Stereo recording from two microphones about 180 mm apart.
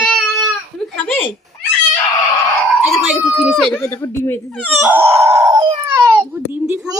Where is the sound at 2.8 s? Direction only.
5° right (ahead or behind).